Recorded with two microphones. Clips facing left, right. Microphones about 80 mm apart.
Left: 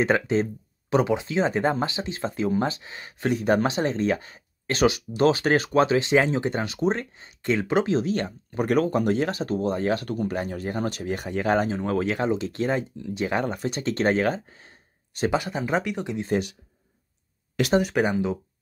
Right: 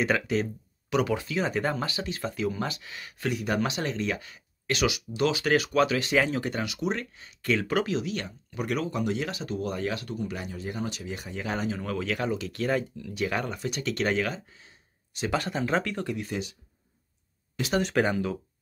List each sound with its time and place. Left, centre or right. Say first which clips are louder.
0.0 s speech: left 4 dB; left
11.7 s speech: left 6 dB; left
15.3 s speech: even; centre
16.3 s speech: left 8 dB; left
17.8 s speech: left 2 dB; centre